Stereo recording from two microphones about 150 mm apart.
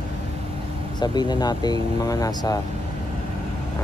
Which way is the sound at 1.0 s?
30° left (ahead or behind).